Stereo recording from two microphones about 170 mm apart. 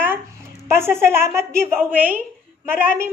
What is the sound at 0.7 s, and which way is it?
A woman's voice, 15° right (ahead or behind).